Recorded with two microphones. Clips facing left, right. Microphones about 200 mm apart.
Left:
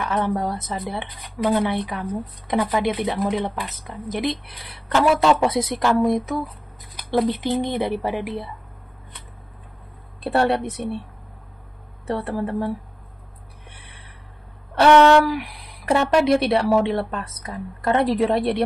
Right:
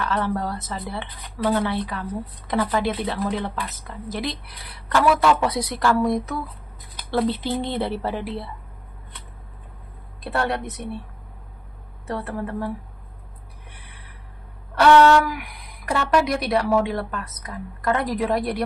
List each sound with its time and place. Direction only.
0.0 s speech: 15° left (ahead or behind)
10.2 s speech: 30° left (ahead or behind)
12.2 s speech: 30° left (ahead or behind)
14.8 s speech: 25° left (ahead or behind)